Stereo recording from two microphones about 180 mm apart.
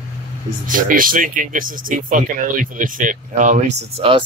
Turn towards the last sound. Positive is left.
turn(degrees=-30)  # may be behind; listen again after turning